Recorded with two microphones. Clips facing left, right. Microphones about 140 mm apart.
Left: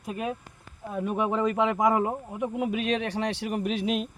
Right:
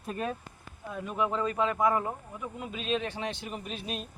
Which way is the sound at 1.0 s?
60° left (ahead or behind).